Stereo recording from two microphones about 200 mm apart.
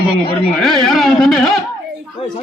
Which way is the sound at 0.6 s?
Centre (ahead or behind).